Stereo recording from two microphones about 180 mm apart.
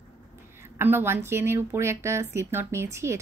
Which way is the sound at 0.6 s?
15° right (ahead or behind).